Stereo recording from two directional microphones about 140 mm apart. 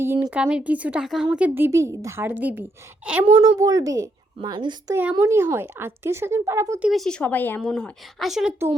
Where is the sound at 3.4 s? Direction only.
25° right (ahead or behind).